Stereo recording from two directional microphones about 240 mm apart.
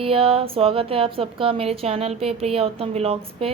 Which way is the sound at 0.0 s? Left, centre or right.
Right.